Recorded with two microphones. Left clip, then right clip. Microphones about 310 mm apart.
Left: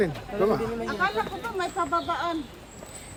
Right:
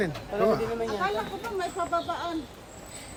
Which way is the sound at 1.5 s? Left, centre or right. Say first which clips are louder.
Left 2 dB; left.